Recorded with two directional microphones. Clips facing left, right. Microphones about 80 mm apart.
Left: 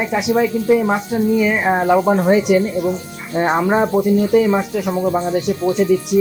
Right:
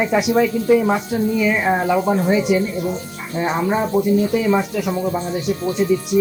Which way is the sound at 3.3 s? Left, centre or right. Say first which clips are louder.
Left 4 dB; left.